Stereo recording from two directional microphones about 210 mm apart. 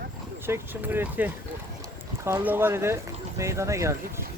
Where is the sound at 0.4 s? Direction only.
10° right (ahead or behind).